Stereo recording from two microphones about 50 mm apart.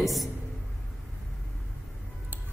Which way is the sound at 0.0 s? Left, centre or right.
Centre.